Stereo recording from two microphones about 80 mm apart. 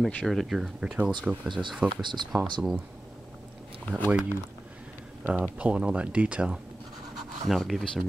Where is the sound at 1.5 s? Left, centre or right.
Right.